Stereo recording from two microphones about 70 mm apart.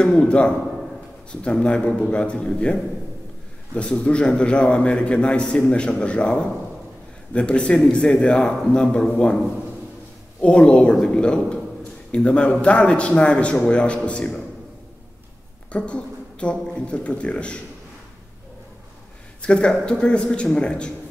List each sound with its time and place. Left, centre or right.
0.0 s a man's voice: centre
10.4 s a man's voice: centre
15.7 s a man's voice: centre
19.4 s a man's voice: centre